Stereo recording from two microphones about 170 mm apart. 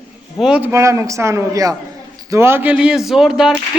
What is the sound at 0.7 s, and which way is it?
Speech, 15° right (ahead or behind).